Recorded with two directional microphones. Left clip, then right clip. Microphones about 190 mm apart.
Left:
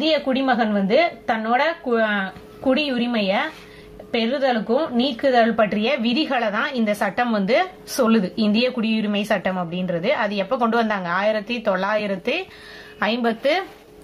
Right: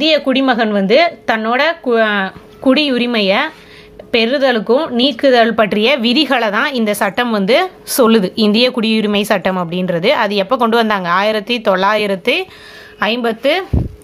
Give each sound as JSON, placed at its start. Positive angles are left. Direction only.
{"t": 0.0, "sound": "a woman's voice", "side_deg": -40}